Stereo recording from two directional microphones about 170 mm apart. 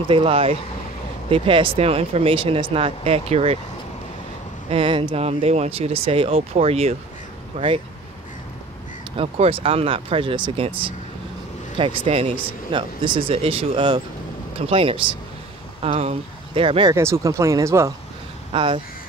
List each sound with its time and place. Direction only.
0.1 s speech: 35° right (ahead or behind)
4.6 s speech: 35° right (ahead or behind)
9.1 s speech: 35° right (ahead or behind)
16.9 s speech: 15° right (ahead or behind)
18.5 s speech: 30° right (ahead or behind)